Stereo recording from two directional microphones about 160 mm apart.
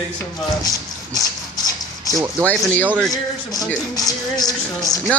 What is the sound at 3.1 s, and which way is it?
Speech, 25° left (ahead or behind).